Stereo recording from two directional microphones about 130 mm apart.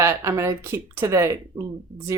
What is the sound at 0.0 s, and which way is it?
Speech, 20° right (ahead or behind).